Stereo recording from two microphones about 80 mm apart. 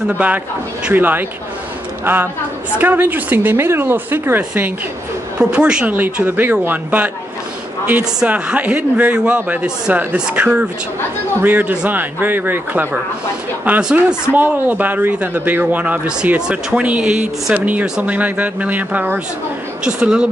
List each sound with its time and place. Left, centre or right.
0.2 s speech: centre
5.4 s speech: centre
6.2 s speech: right
8.3 s speech: centre
13.7 s speech: centre
14.3 s speech: right